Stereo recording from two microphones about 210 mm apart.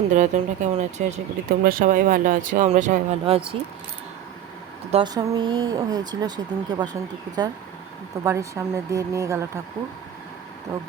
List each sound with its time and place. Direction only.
0.1 s speech: 35° right (ahead or behind)
4.9 s speech: 25° right (ahead or behind)
8.2 s speech: 15° right (ahead or behind)